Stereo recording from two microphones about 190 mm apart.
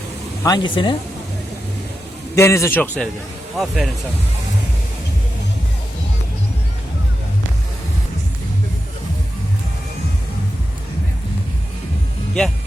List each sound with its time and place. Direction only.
0.4 s speech: 20° left (ahead or behind)
2.3 s a man's voice: 15° left (ahead or behind); by 3.9 s centre (ahead or behind)